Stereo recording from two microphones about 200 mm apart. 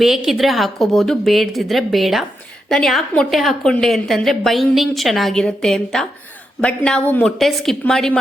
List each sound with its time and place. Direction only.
0.0 s a woman's voice: centre (ahead or behind)